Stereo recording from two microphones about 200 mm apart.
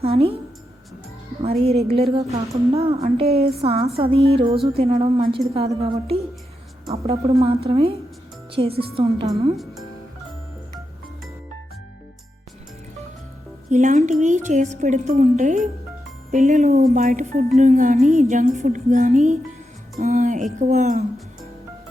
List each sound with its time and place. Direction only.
0.0 s a woman's voice: 30° right (ahead or behind)
1.6 s a woman's voice: 30° right (ahead or behind)
9.3 s speech: centre (ahead or behind)
13.7 s speech: 40° right (ahead or behind)